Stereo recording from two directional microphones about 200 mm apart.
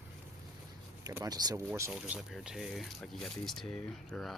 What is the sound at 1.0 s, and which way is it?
Speech, 20° right (ahead or behind).